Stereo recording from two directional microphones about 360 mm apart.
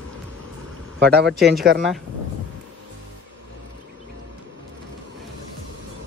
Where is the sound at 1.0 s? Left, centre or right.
Right.